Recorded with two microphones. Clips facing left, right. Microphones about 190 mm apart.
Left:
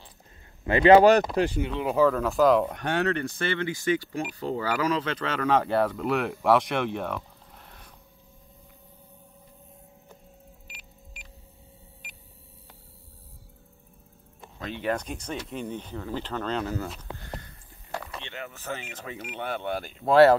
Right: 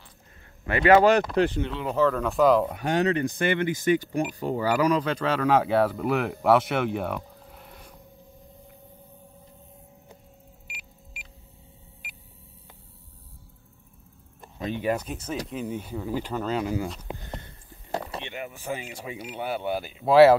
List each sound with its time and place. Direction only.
0.7 s speech: 25° left (ahead or behind)
1.3 s speech: 10° left (ahead or behind)
2.9 s speech: 15° right (ahead or behind)
10.7 s car: 10° right (ahead or behind)
14.6 s speech: 15° right (ahead or behind)
17.1 s a sound: 20° right (ahead or behind)
17.9 s a sound: 30° right (ahead or behind)
18.2 s speech: 15° right (ahead or behind)